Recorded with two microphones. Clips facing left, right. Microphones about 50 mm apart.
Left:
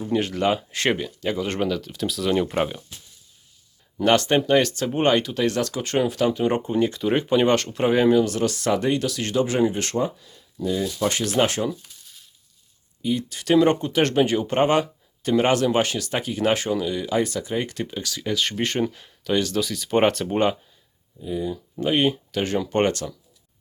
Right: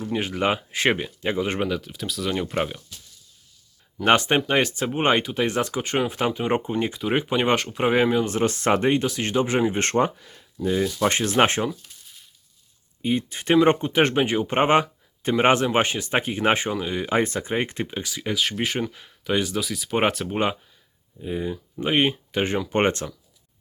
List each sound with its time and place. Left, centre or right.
0.1 s speech: centre
0.4 s speech: right; by 2.8 s centre
4.0 s speech: right
9.7 s speech: right
13.0 s speech: right; by 18.4 s centre
18.4 s speech: centre
21.2 s speech: right
21.5 s speech: right